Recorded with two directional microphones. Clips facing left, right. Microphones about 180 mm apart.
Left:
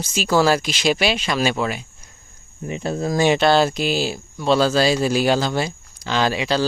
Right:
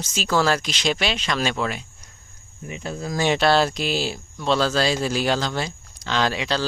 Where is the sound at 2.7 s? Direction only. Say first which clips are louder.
Left 7 dB; 35° left (ahead or behind).